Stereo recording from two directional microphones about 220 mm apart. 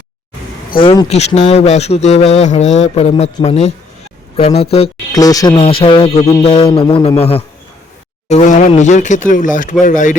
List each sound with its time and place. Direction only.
0.8 s speech: 25° left (ahead or behind)
5.1 s speech: 15° left (ahead or behind); by 10.2 s 35° left (ahead or behind)